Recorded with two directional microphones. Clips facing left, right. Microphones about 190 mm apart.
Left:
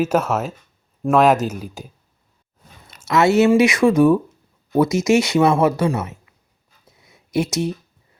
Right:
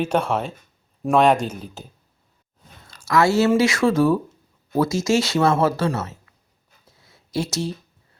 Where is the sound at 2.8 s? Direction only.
20° left (ahead or behind).